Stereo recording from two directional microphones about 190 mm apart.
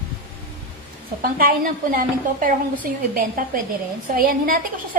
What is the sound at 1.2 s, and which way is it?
A woman's voice, 50° right (ahead or behind).